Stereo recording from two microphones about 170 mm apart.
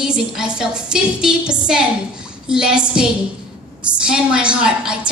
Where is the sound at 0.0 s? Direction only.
5° right (ahead or behind).